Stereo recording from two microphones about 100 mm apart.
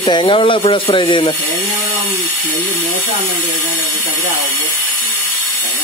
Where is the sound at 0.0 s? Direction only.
50° left (ahead or behind).